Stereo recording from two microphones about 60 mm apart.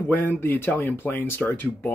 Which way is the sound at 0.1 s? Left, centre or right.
Left.